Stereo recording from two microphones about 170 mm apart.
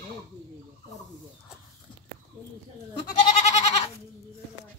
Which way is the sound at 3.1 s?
45° left (ahead or behind).